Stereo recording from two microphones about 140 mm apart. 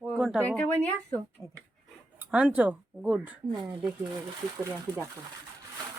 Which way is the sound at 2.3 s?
10° right (ahead or behind).